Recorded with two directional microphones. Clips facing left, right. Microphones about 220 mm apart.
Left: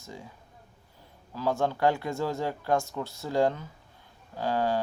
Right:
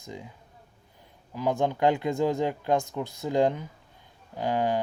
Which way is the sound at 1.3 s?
15° right (ahead or behind).